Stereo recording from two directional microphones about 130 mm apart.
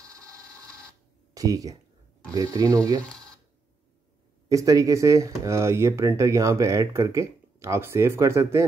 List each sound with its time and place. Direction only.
0.0 s printer: 25° right (ahead or behind)
1.3 s speech: 25° right (ahead or behind)
4.5 s speech: 25° right (ahead or behind)